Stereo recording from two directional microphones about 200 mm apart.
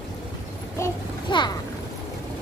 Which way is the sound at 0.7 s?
20° left (ahead or behind).